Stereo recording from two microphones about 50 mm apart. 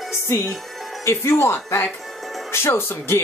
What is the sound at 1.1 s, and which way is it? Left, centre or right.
Speech, left.